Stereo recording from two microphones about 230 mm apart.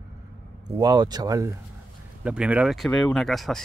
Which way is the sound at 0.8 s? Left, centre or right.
Centre.